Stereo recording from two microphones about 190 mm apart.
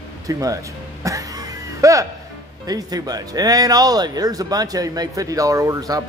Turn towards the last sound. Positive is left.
turn(degrees=-20)  # may be behind; listen again after turning